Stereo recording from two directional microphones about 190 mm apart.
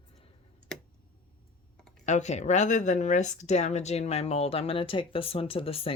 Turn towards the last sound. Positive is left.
turn(degrees=30)  # may be behind; listen again after turning